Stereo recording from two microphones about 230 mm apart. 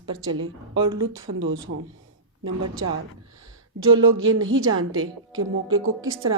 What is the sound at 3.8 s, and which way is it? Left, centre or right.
A woman's voice, right.